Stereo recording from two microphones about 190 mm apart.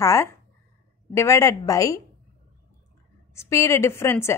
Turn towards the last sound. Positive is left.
turn(degrees=15)  # may be behind; listen again after turning